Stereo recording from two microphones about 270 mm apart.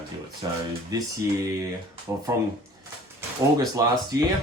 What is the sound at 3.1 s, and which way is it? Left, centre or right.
Speech, centre.